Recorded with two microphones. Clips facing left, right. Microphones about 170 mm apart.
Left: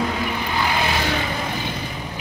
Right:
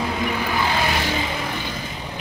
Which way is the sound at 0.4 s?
15° left (ahead or behind).